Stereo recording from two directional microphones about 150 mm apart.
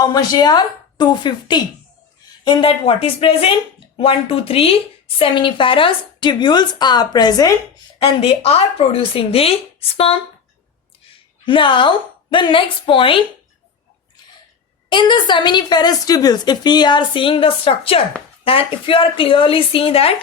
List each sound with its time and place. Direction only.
0.0 s a woman's voice: 25° left (ahead or behind)
7.9 s a woman's voice: 40° left (ahead or behind)
11.4 s a woman's voice: 35° left (ahead or behind)
14.8 s a woman's voice: 30° left (ahead or behind)